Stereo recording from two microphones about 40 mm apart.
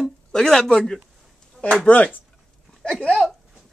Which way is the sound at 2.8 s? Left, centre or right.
Left.